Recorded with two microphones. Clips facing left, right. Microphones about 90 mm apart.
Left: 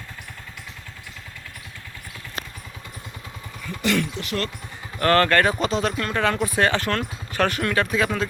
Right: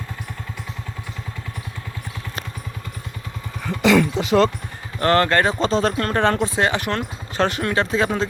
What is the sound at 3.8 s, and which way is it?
Speech, 90° right.